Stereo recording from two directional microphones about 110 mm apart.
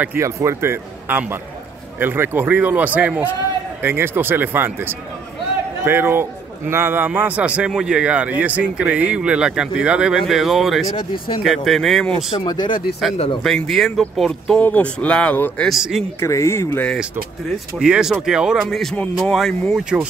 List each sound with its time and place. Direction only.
0.0 s speech: 20° right (ahead or behind); by 12.3 s 5° left (ahead or behind)
12.4 s speech: 40° left (ahead or behind)
13.4 s speech: centre (ahead or behind)
14.6 s speech: 15° left (ahead or behind)
15.7 s speech: 5° right (ahead or behind)
16.2 s speech: 25° left (ahead or behind)
17.7 s speech: 5° right (ahead or behind)
19.7 s speech: 10° right (ahead or behind)